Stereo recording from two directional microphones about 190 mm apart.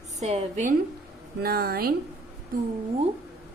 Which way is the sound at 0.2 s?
35° right (ahead or behind).